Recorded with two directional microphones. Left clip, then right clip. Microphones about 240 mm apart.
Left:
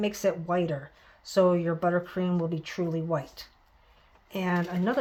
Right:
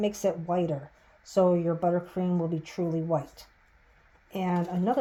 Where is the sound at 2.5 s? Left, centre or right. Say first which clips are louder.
Even; centre.